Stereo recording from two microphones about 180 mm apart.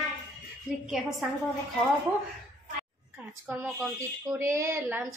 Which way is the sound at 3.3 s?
10° right (ahead or behind).